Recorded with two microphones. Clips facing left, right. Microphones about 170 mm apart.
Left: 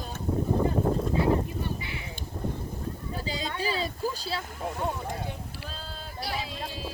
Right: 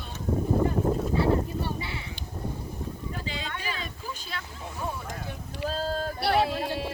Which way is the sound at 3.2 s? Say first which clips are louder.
Left 6 dB; 35° left (ahead or behind).